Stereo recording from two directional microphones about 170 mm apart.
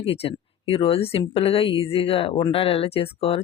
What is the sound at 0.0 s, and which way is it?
Speech, 35° left (ahead or behind).